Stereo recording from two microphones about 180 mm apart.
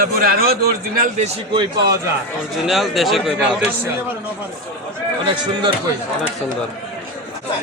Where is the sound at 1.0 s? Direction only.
40° right (ahead or behind).